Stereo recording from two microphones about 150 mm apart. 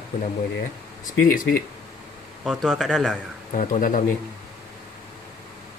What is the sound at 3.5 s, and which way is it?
Speech, 60° left (ahead or behind).